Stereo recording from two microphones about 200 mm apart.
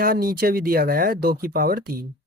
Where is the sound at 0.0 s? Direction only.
45° right (ahead or behind).